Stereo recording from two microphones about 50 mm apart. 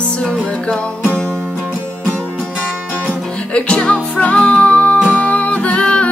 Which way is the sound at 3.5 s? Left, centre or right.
Left.